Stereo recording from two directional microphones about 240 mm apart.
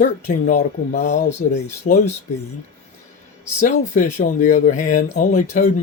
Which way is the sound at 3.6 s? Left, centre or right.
Left.